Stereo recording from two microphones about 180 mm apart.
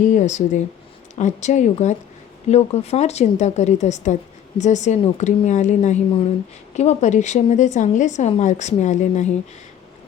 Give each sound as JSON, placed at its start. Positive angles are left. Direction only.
{"t": 0.1, "sound": "speech", "side_deg": 40}